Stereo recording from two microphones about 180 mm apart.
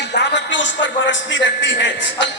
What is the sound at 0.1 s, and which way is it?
A man's voice, 70° left (ahead or behind).